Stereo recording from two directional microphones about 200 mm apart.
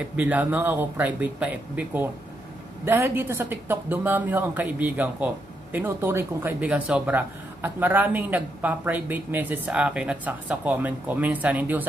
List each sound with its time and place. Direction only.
0.1 s speech: 10° right (ahead or behind)